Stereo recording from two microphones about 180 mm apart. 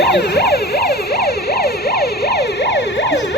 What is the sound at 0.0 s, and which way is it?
Emergency vehicle, 65° left (ahead or behind).